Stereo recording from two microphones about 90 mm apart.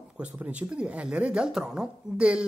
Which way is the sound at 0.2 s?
15° right (ahead or behind).